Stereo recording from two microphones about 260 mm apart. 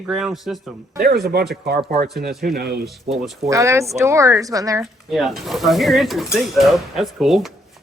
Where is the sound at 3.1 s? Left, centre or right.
Centre.